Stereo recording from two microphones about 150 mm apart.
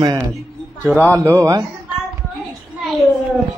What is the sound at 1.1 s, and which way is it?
Speech, 20° right (ahead or behind).